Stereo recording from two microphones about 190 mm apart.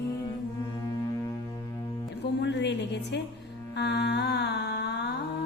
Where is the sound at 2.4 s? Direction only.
65° left (ahead or behind).